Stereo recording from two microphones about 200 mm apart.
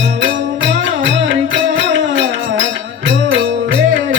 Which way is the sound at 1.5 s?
65° right (ahead or behind).